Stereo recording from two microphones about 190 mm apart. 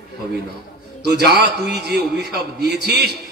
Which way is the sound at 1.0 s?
60° right (ahead or behind).